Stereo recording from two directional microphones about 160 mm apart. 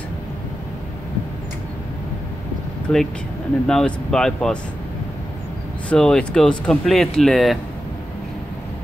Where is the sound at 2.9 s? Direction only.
5° left (ahead or behind).